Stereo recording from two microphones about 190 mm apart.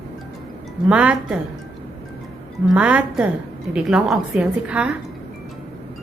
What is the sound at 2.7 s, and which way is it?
A woman's voice, 5° right (ahead or behind).